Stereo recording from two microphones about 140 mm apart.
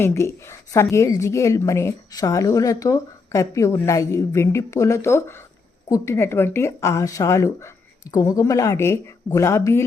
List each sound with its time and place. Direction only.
0.0 s a woman's voice: 20° left (ahead or behind)